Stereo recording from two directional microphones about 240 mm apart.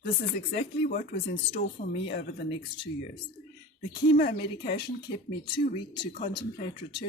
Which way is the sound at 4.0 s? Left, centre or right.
Left.